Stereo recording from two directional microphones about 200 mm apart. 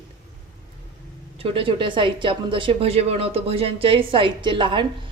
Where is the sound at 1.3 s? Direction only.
25° right (ahead or behind).